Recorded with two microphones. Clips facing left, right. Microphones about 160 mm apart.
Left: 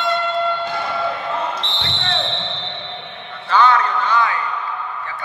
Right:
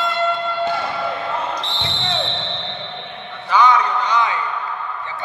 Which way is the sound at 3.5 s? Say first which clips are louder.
Even; 15° right (ahead or behind).